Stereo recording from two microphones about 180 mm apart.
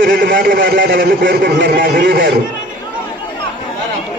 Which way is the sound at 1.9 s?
75° right (ahead or behind).